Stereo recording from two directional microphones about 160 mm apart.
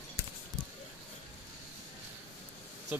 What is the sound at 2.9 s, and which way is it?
Speech, 10° right (ahead or behind).